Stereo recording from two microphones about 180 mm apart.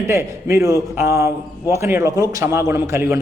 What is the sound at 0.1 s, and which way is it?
A man's voice, 15° right (ahead or behind).